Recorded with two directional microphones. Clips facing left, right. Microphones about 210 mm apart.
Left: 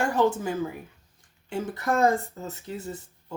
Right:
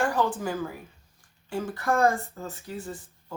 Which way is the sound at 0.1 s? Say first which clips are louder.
Left 3 dB; 25° left (ahead or behind).